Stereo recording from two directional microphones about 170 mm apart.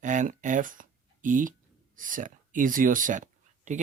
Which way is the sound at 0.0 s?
45° right (ahead or behind).